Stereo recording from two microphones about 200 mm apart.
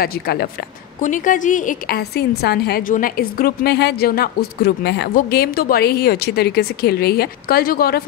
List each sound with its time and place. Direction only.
0.0 s a woman's voice: 50° left (ahead or behind)